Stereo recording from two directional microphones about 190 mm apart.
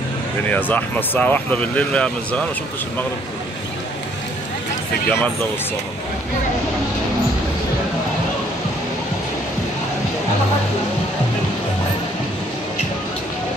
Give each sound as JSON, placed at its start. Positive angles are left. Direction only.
{"t": 0.5, "sound": "speech", "side_deg": 10}